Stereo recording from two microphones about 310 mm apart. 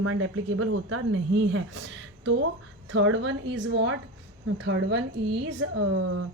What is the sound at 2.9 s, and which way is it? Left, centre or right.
Speech, right.